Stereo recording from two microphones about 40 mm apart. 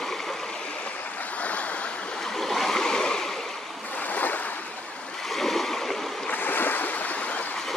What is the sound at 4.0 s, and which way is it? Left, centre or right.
Waves, left.